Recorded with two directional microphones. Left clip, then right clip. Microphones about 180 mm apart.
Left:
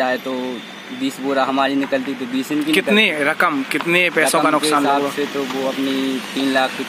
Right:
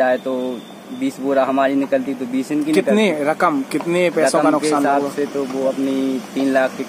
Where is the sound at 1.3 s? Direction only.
5° left (ahead or behind).